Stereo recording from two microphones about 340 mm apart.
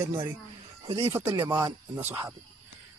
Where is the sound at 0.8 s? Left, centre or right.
Centre.